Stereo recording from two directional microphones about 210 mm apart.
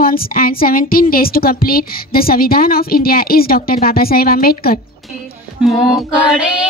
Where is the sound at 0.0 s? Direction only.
45° left (ahead or behind).